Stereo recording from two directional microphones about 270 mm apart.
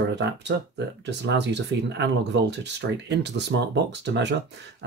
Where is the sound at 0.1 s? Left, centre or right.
Right.